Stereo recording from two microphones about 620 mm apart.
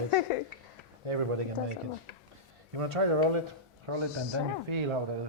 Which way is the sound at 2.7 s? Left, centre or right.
Right.